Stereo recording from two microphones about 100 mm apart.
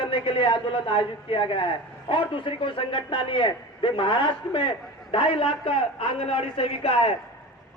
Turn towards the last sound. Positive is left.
turn(degrees=75)  # may be behind; listen again after turning